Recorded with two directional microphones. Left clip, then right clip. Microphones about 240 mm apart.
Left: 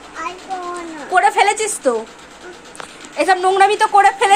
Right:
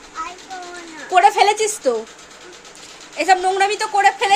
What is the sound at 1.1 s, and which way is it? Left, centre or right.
Speech, right.